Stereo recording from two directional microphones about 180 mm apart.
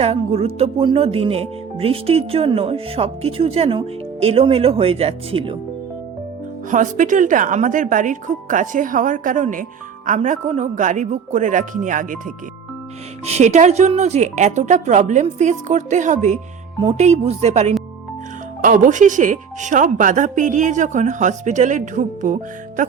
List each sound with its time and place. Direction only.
0.0 s speech: 35° right (ahead or behind)
6.7 s speech: 45° right (ahead or behind)
13.2 s speech: 40° right (ahead or behind)